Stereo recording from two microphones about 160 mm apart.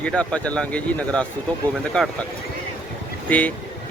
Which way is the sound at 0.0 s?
5° left (ahead or behind).